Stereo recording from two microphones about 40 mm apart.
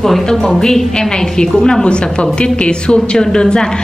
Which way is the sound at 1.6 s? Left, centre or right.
Centre.